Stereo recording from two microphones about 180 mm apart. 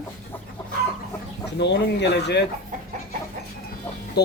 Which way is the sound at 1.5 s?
70° left (ahead or behind).